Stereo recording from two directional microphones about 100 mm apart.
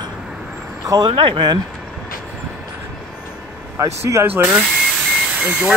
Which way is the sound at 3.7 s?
30° right (ahead or behind).